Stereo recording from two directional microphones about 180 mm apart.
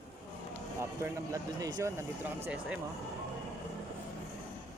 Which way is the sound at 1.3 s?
20° right (ahead or behind).